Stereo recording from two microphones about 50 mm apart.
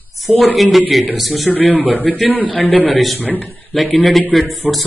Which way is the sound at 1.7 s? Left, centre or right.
Right.